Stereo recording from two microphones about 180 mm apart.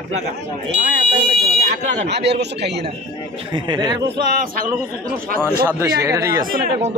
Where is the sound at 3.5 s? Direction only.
25° right (ahead or behind).